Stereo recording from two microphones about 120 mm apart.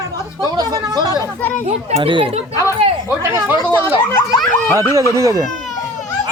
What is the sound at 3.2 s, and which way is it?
Speech, 20° right (ahead or behind).